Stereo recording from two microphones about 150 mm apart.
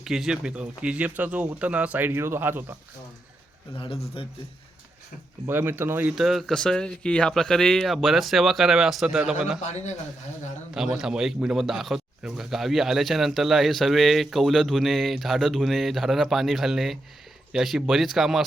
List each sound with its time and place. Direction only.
0.0 s speech: 5° right (ahead or behind)
4.2 s speech: 35° left (ahead or behind)
5.5 s speech: 15° right (ahead or behind)
9.6 s a man's voice: 50° left (ahead or behind)
10.8 s speech: 5° right (ahead or behind)